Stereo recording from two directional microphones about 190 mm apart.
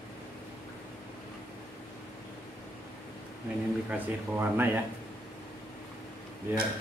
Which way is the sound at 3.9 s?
10° right (ahead or behind).